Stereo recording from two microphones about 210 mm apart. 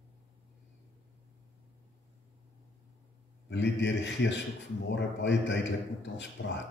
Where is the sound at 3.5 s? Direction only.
55° left (ahead or behind).